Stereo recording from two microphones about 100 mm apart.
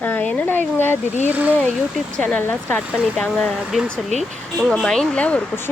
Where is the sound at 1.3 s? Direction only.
15° right (ahead or behind).